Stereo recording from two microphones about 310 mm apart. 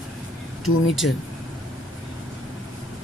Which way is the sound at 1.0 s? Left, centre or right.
Left.